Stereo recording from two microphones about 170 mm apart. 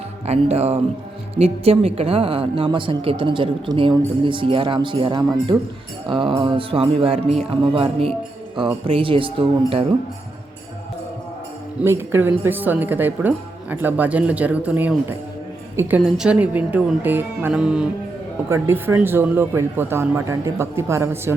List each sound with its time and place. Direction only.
0.3 s speech: 40° right (ahead or behind)
11.8 s a woman's voice: 15° right (ahead or behind)
16.0 s a woman's voice: 5° right (ahead or behind)
18.4 s a woman's voice: 15° right (ahead or behind)